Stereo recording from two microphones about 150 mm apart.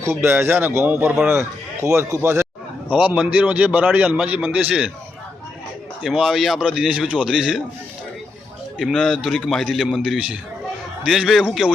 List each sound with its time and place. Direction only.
0.0 s a man's voice: 15° right (ahead or behind)
6.0 s a man's voice: centre (ahead or behind)
8.8 s a man's voice: centre (ahead or behind)